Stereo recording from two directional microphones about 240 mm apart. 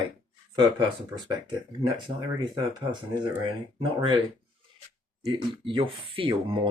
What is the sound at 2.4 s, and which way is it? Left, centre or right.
Speech, centre.